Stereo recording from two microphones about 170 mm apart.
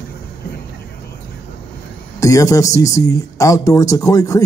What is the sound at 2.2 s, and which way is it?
Speech, 20° left (ahead or behind).